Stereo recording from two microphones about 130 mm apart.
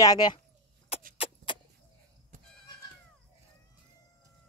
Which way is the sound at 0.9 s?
50° left (ahead or behind).